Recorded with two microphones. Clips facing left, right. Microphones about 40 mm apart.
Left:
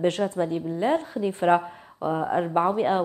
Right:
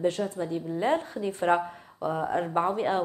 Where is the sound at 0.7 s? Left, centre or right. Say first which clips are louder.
Left 2 dB; centre.